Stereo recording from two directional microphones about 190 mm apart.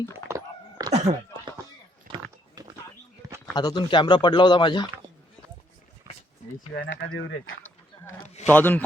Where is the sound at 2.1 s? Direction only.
25° right (ahead or behind).